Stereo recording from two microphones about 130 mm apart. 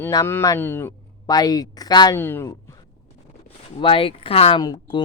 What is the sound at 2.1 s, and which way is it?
Speech, 15° left (ahead or behind).